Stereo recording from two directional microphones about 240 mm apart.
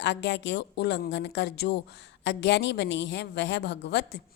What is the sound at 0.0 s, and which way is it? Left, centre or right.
A woman's voice, left.